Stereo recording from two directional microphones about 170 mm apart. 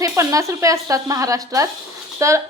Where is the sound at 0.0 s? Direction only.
20° right (ahead or behind).